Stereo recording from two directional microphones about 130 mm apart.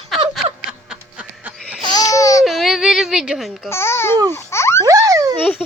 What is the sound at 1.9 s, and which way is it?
Baby cry, 25° left (ahead or behind).